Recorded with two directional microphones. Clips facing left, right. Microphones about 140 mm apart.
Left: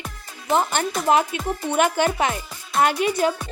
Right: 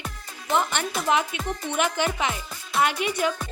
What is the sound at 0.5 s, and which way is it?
A woman's voice, 40° left (ahead or behind).